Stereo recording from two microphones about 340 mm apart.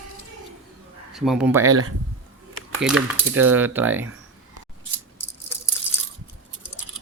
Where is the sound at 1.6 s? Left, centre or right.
Right.